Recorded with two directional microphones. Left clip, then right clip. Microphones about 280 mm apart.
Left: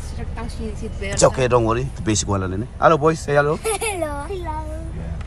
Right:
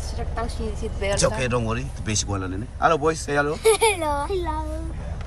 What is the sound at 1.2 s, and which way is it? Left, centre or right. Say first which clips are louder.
Speech: left 10 dB; centre.